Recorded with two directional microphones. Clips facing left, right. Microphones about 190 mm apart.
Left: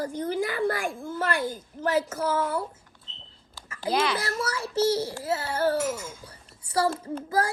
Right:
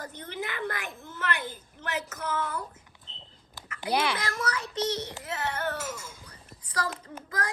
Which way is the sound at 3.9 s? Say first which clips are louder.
Left 2 dB; 10° right (ahead or behind).